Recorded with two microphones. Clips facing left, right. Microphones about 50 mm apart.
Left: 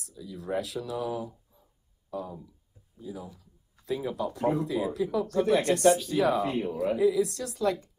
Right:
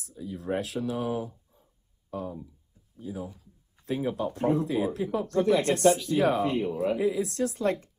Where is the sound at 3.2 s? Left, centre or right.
Right.